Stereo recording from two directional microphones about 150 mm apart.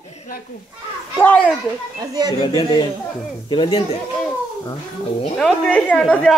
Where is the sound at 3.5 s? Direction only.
35° left (ahead or behind).